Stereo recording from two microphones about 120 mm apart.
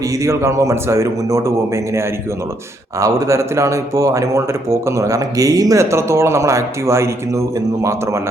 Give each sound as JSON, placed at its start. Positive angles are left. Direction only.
{"t": 0.2, "sound": "speech", "side_deg": -25}